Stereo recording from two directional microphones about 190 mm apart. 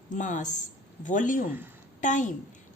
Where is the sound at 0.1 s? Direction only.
40° left (ahead or behind).